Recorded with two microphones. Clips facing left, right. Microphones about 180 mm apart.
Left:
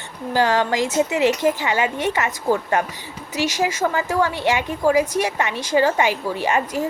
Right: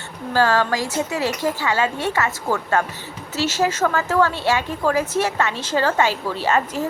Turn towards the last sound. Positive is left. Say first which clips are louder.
# even
turn(degrees=15)  # may be behind; listen again after turning